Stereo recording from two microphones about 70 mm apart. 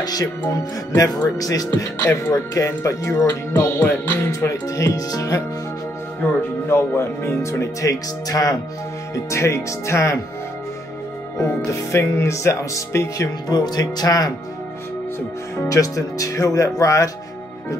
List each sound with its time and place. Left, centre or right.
0.0 s speech: left
3.8 s music: left
4.6 s speech: left
6.7 s speech: left
7.9 s speech: left
9.1 s speech: left
11.3 s speech: left
13.5 s speech: left
15.5 s speech: left